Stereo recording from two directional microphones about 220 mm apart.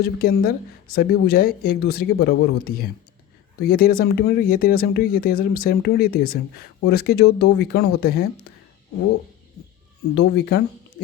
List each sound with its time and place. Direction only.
0.0 s a woman's voice: 45° left (ahead or behind)
10.2 s a woman's voice: 45° left (ahead or behind)